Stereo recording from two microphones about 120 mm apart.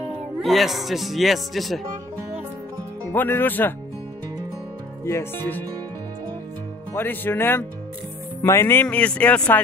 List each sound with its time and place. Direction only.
0.4 s speech: centre (ahead or behind)
3.1 s speech: 15° left (ahead or behind)
5.0 s speech: 20° left (ahead or behind)
6.9 s speech: 15° left (ahead or behind)
8.8 s speech: 10° left (ahead or behind)